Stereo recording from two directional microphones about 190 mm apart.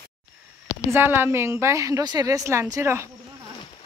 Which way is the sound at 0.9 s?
10° right (ahead or behind).